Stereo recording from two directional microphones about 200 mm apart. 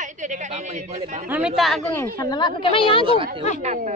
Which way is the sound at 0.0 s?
40° right (ahead or behind).